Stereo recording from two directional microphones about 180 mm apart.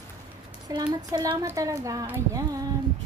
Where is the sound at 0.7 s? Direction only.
25° right (ahead or behind).